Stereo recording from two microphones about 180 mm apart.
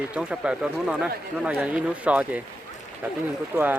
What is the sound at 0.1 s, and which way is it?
Speech, 5° right (ahead or behind).